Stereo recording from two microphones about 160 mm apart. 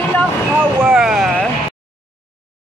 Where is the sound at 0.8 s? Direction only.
5° right (ahead or behind).